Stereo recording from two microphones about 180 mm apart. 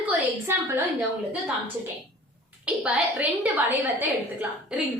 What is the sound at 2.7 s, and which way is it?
A woman's voice, 10° right (ahead or behind).